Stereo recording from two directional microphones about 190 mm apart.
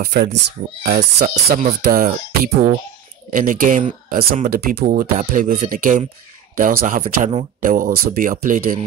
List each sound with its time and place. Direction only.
0.0 s speech: 55° right (ahead or behind)
1.1 s speech: 40° right (ahead or behind)